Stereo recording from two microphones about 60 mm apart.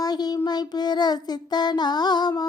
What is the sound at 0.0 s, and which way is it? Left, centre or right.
Child singing, left.